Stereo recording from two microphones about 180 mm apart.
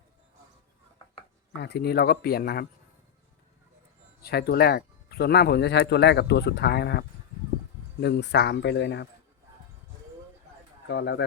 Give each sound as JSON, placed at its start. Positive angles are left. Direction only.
{"t": 1.5, "sound": "speech", "side_deg": 65}
{"t": 4.2, "sound": "speech", "side_deg": 60}
{"t": 8.0, "sound": "speech", "side_deg": 70}
{"t": 10.8, "sound": "speech", "side_deg": 75}